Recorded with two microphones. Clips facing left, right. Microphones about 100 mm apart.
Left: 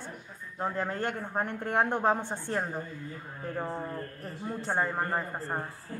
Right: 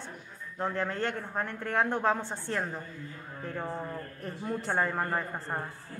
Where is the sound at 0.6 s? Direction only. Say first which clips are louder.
Even; 10° left (ahead or behind).